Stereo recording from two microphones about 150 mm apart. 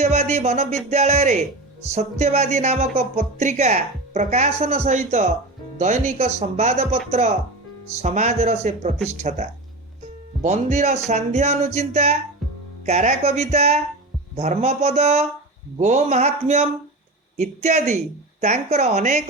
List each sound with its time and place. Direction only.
0.0 s music: 45° right (ahead or behind)
0.9 s speech: 50° right (ahead or behind)